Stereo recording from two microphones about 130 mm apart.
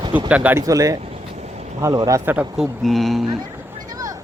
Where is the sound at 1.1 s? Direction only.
60° right (ahead or behind).